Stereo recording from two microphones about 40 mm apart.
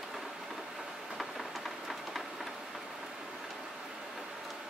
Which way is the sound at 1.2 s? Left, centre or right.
Centre.